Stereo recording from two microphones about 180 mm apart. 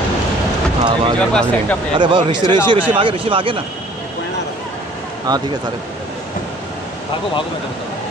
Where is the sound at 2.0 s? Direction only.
25° right (ahead or behind).